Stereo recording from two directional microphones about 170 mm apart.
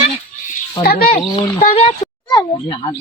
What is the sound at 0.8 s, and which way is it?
Speech, 60° left (ahead or behind).